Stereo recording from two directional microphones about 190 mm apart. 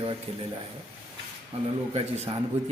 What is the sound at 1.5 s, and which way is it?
Speech, 30° right (ahead or behind).